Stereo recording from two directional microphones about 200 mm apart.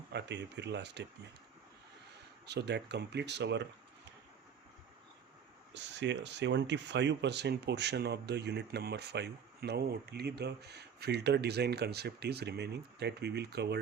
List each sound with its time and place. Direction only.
0.1 s speech: 60° right (ahead or behind)
2.5 s speech: 60° right (ahead or behind)
5.7 s speech: 60° right (ahead or behind)